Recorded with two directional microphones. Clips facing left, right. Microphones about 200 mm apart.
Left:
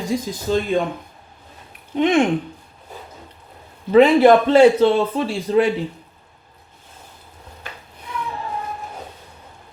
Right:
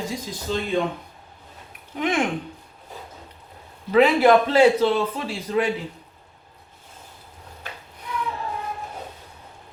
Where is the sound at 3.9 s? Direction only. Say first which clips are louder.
Left 5 dB; 25° left (ahead or behind).